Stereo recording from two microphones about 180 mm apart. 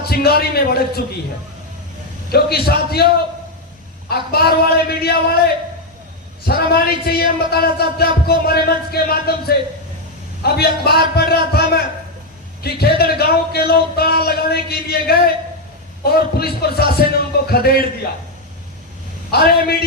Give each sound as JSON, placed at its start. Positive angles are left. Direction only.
{"t": 0.0, "sound": "a man's voice", "side_deg": 60}
{"t": 2.3, "sound": "a man's voice", "side_deg": 60}
{"t": 4.1, "sound": "a man's voice", "side_deg": 60}
{"t": 6.5, "sound": "a man's voice", "side_deg": 60}
{"t": 19.3, "sound": "a man's voice", "side_deg": 60}